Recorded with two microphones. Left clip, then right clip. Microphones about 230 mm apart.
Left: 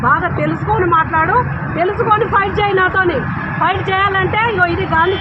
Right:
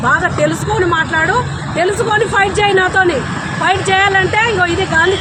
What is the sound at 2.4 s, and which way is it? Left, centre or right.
Speech, right.